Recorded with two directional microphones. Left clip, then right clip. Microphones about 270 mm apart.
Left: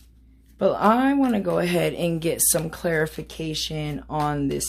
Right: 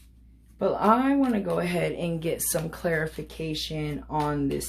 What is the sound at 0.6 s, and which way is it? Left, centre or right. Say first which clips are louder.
Speech: left 3 dB; left.